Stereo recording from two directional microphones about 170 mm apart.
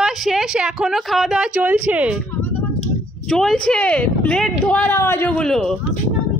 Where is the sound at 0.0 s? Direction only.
Centre (ahead or behind).